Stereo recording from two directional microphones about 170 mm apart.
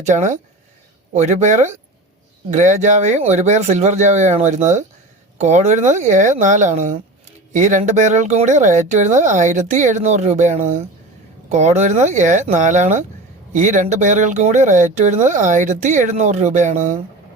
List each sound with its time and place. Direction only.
0.0 s speech: 45° right (ahead or behind)